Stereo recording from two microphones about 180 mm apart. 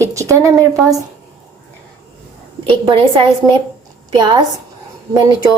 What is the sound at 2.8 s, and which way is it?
Speech, 30° right (ahead or behind).